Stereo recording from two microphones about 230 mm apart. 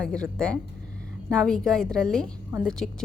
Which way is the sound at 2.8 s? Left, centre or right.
Left.